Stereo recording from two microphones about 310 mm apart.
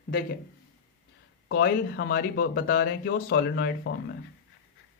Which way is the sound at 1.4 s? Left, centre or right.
Left.